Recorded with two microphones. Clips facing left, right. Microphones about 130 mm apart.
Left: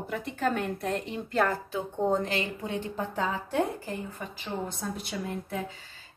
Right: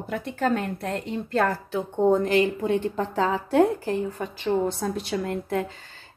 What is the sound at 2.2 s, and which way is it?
Speech, 50° right (ahead or behind).